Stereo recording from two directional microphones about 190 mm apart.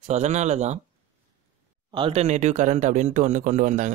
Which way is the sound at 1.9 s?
30° right (ahead or behind).